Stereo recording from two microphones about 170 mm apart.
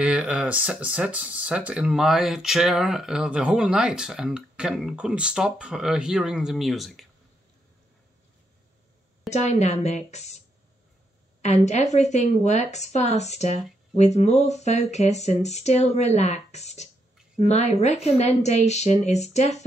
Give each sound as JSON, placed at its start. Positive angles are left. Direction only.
{"t": 0.0, "sound": "speech", "side_deg": -5}
{"t": 9.3, "sound": "speech", "side_deg": 40}
{"t": 11.4, "sound": "speech", "side_deg": 40}